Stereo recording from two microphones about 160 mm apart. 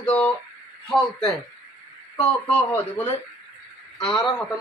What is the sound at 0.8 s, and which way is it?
A man's voice, centre (ahead or behind).